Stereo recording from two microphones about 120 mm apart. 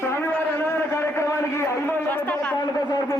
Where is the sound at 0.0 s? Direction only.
20° left (ahead or behind).